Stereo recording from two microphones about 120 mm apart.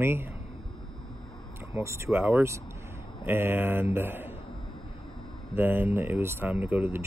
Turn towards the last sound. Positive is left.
turn(degrees=-20)  # may be behind; listen again after turning